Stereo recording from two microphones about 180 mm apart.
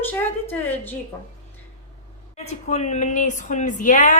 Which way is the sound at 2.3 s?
40° left (ahead or behind).